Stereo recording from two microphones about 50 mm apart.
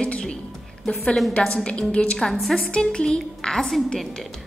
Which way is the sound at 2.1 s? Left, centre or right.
Centre.